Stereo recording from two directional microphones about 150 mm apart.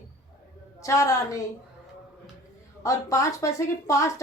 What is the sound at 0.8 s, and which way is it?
Speech, 20° left (ahead or behind).